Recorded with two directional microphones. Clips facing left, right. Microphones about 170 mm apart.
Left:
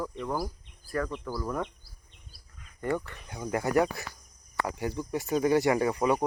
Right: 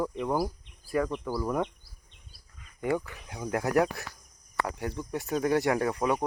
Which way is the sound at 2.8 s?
10° right (ahead or behind).